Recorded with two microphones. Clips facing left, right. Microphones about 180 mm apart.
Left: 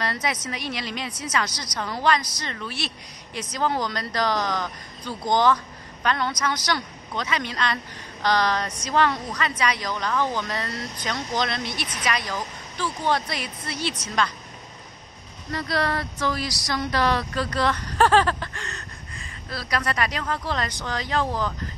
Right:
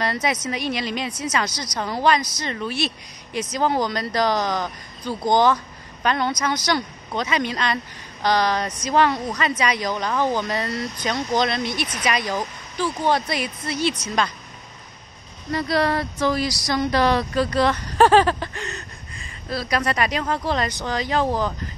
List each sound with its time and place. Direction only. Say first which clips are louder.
0.0 s a woman's voice: right 4 dB; 20° right (ahead or behind)
15.5 s a woman's voice: right 5 dB; 15° right (ahead or behind)